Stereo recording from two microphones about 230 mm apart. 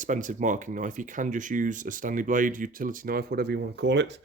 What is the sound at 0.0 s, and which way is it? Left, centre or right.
Speech, right.